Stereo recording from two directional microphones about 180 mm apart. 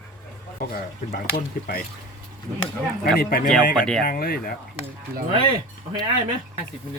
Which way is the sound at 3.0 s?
55° left (ahead or behind).